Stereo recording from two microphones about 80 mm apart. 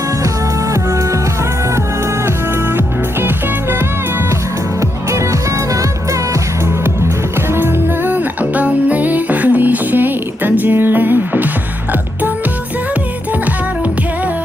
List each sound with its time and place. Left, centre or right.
0.7 s music: right
2.2 s music: right
4.8 s music: right
7.5 s music: right